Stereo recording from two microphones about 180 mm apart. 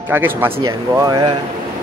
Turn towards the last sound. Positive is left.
turn(degrees=-20)  # may be behind; listen again after turning